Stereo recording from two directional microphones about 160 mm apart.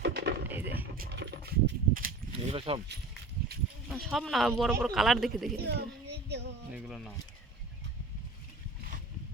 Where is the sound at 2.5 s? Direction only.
35° right (ahead or behind).